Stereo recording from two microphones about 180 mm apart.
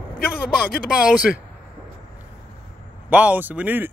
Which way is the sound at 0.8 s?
5° right (ahead or behind).